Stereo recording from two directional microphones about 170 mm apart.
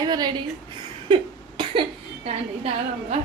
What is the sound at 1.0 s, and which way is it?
Cough, 30° right (ahead or behind).